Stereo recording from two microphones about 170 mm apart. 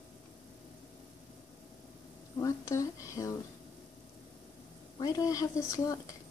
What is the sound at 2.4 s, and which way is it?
Speech, 20° left (ahead or behind).